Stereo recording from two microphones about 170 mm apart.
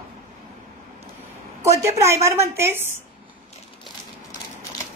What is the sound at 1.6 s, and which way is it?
A woman's voice, 15° right (ahead or behind).